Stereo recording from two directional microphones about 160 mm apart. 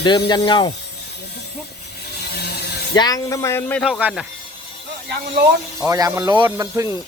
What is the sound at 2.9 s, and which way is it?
Speech, 25° left (ahead or behind).